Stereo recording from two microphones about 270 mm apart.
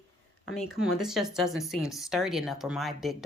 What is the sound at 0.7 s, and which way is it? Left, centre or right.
Speech, centre.